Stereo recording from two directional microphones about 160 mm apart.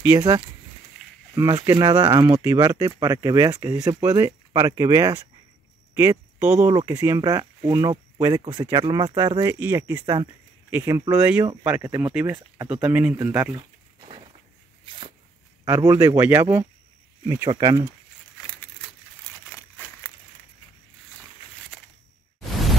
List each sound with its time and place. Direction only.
0.0 s speech: 20° right (ahead or behind)
1.0 s a sound: centre (ahead or behind)
1.3 s speech: 25° right (ahead or behind)
14.9 s dog: 35° right (ahead or behind)
15.6 s speech: 20° right (ahead or behind)